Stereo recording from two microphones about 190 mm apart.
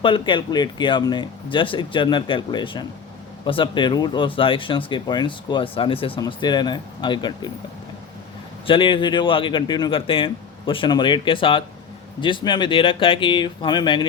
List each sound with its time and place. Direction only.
0.0 s speech: 25° left (ahead or behind)
8.6 s speech: 25° left (ahead or behind)